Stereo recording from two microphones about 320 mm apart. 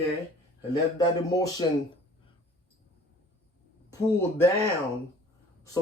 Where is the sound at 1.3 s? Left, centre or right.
Centre.